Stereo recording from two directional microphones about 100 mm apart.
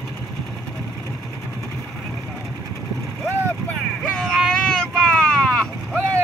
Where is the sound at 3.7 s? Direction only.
10° left (ahead or behind).